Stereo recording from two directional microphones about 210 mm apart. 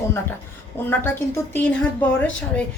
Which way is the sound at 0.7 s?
10° left (ahead or behind).